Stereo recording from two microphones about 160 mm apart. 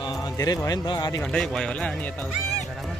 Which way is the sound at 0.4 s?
25° left (ahead or behind).